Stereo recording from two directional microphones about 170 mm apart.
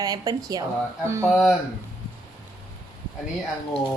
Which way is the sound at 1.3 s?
Centre (ahead or behind).